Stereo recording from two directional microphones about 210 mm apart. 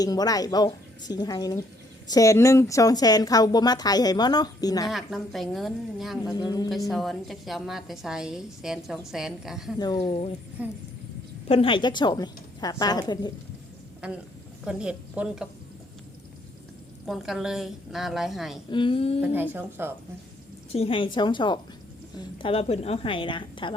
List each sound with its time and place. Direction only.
0.0 s a woman's voice: 20° left (ahead or behind)
4.9 s a woman's voice: centre (ahead or behind)
6.3 s a woman's voice: 20° left (ahead or behind)
6.7 s a woman's voice: centre (ahead or behind)
9.7 s a woman's voice: 20° left (ahead or behind)
10.6 s speech: 5° right (ahead or behind)
11.4 s a woman's voice: 25° left (ahead or behind)
14.0 s a woman's voice: 5° right (ahead or behind)
17.1 s a woman's voice: centre (ahead or behind)
18.7 s a woman's voice: 25° left (ahead or behind)
19.2 s speech: 10° right (ahead or behind)
20.7 s a woman's voice: 25° left (ahead or behind)